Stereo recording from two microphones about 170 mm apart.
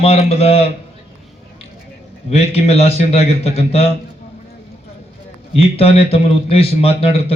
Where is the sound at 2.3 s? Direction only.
35° left (ahead or behind).